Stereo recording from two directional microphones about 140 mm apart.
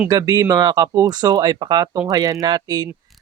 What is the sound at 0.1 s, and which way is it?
Speech, 25° right (ahead or behind).